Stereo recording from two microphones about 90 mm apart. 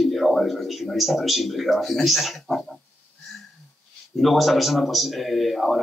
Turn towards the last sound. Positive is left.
turn(degrees=0)  # may be behind; listen again after turning